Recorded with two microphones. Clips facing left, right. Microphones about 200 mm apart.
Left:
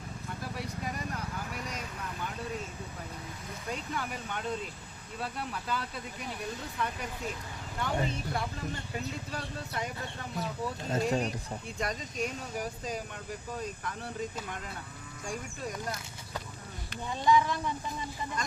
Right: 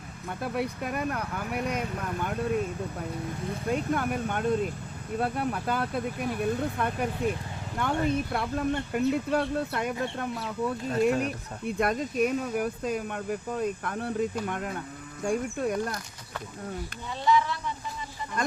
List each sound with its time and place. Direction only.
0.3 s speech: 60° right (ahead or behind)
3.7 s speech: 55° right (ahead or behind)
18.4 s speech: 55° right (ahead or behind)